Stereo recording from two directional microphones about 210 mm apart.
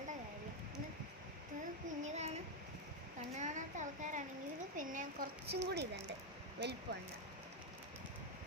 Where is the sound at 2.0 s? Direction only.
35° right (ahead or behind); by 5.9 s 50° right (ahead or behind).